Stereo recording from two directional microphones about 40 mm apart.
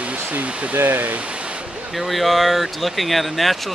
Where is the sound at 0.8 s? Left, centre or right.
Right.